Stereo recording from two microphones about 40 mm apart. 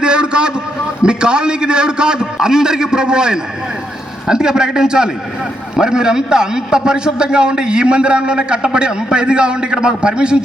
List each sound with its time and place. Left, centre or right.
0.0 s vehicle: right
1.0 s a man's voice: right